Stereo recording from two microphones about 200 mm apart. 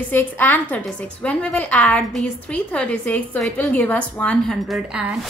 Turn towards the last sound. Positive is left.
turn(degrees=-5)  # may be behind; listen again after turning